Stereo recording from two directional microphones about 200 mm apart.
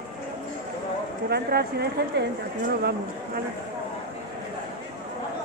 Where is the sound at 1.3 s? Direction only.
55° right (ahead or behind).